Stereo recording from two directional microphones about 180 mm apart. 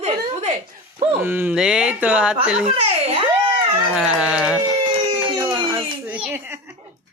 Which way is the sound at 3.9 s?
5° right (ahead or behind).